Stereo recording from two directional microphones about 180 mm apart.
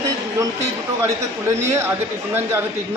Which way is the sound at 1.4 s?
15° right (ahead or behind).